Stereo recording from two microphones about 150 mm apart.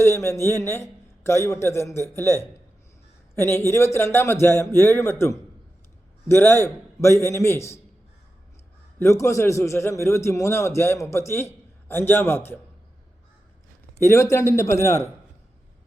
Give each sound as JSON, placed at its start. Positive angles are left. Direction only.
{"t": 0.0, "sound": "a man's voice", "side_deg": 15}
{"t": 9.0, "sound": "a man's voice", "side_deg": 20}
{"t": 14.1, "sound": "a man's voice", "side_deg": 20}